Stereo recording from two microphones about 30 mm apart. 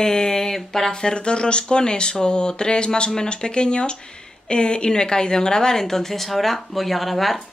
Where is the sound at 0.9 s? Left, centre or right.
Left.